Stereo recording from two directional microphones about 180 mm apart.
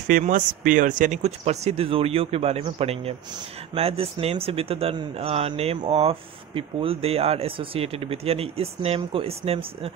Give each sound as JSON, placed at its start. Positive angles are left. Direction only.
{"t": 0.1, "sound": "speech", "side_deg": -45}